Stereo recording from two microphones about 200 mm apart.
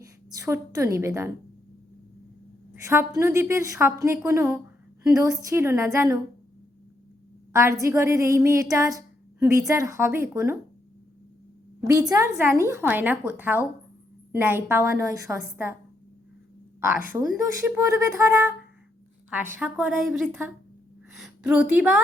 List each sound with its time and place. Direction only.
0.0 s a woman's voice: 15° right (ahead or behind)
2.8 s a woman's voice: 15° right (ahead or behind)
7.5 s a woman's voice: 15° right (ahead or behind)
11.8 s a woman's voice: 15° right (ahead or behind)
17.7 s a woman's voice: 15° right (ahead or behind)
19.5 s a woman's voice: 10° right (ahead or behind)